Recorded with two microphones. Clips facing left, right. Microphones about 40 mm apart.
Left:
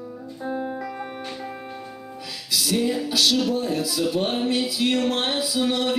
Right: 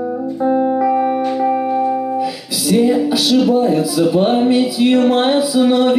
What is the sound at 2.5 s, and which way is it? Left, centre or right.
Speech, centre.